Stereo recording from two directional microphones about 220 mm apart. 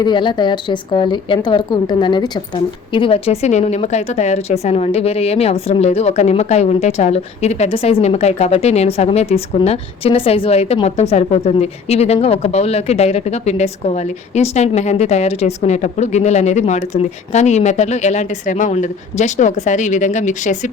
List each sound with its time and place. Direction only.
0.0 s a woman's voice: 20° left (ahead or behind)